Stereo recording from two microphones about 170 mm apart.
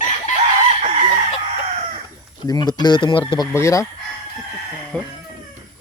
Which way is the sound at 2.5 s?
25° left (ahead or behind).